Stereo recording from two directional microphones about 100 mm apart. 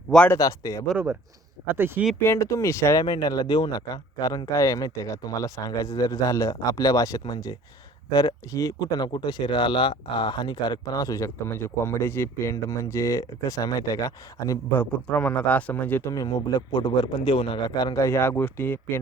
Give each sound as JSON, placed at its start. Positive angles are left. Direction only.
{"t": 0.3, "sound": "speech", "side_deg": 35}
{"t": 1.6, "sound": "speech", "side_deg": -20}
{"t": 2.2, "sound": "speech", "side_deg": 30}
{"t": 3.0, "sound": "speech", "side_deg": 45}
{"t": 8.5, "sound": "speech", "side_deg": 40}
{"t": 14.8, "sound": "speech", "side_deg": 15}
{"t": 16.0, "sound": "a man's voice", "side_deg": 40}
{"t": 17.9, "sound": "speech", "side_deg": 30}